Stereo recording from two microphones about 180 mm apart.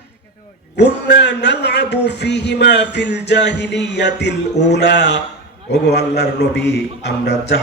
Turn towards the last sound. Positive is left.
turn(degrees=70)  # may be behind; listen again after turning